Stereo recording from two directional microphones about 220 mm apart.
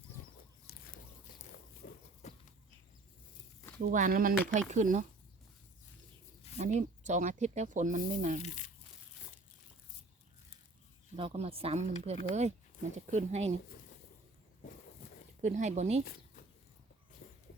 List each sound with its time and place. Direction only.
0.7 s a sound: 45° left (ahead or behind)
1.8 s horse: 40° left (ahead or behind)
2.2 s walk: 30° left (ahead or behind)
3.8 s speech: 40° right (ahead or behind)
6.6 s speech: 30° right (ahead or behind)
8.4 s speech: 35° left (ahead or behind)
11.2 s speech: 25° right (ahead or behind)
15.4 s speech: 35° right (ahead or behind)